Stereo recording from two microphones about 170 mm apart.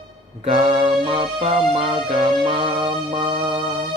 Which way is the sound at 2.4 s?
30° right (ahead or behind).